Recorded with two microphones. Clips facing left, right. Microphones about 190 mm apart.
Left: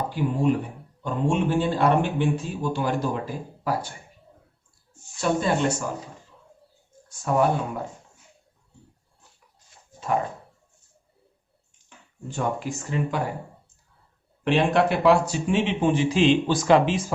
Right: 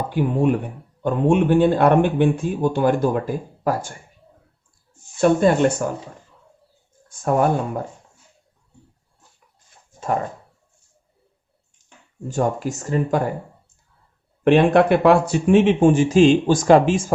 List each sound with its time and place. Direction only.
0.1 s speech: 60° right (ahead or behind)
5.2 s speech: 55° right (ahead or behind)
7.1 s speech: 50° right (ahead or behind)
12.3 s speech: 45° right (ahead or behind)
14.4 s speech: 55° right (ahead or behind)